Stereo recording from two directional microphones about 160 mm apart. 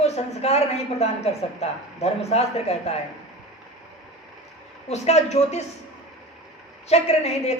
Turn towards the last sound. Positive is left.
turn(degrees=40)  # may be behind; listen again after turning